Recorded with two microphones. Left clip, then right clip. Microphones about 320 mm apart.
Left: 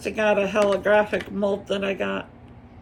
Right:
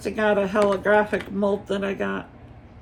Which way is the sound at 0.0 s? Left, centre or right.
Centre.